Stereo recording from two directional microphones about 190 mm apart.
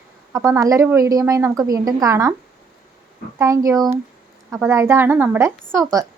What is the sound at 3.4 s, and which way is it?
A woman's voice, 15° right (ahead or behind).